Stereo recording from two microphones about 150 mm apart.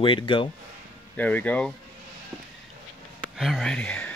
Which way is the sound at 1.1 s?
10° left (ahead or behind).